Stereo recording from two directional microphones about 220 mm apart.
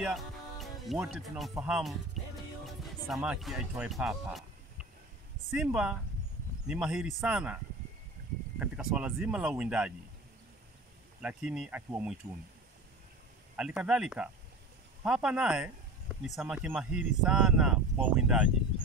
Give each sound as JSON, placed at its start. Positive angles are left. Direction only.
{"t": 0.0, "sound": "speech", "side_deg": 0}
{"t": 2.6, "sound": "music", "side_deg": 0}
{"t": 5.5, "sound": "speech", "side_deg": -5}
{"t": 11.1, "sound": "speech", "side_deg": -5}
{"t": 13.6, "sound": "speech", "side_deg": -5}